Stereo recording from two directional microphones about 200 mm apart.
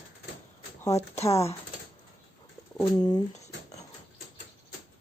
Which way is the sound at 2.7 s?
20° left (ahead or behind).